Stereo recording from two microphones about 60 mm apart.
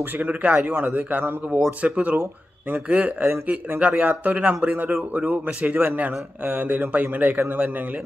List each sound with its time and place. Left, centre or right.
0.2 s a man's voice: right
3.8 s a man's voice: right